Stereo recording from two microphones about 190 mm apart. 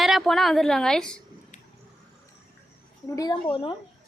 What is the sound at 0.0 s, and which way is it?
A woman's voice, centre (ahead or behind).